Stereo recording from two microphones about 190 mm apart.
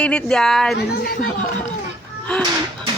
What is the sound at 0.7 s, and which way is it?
Speech, 55° left (ahead or behind).